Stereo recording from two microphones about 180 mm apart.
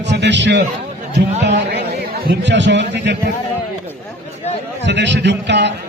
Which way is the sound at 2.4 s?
80° right.